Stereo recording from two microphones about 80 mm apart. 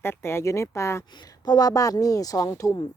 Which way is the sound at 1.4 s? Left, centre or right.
Left.